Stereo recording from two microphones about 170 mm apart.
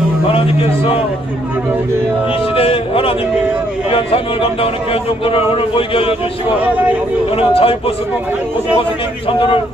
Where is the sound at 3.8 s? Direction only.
35° left (ahead or behind).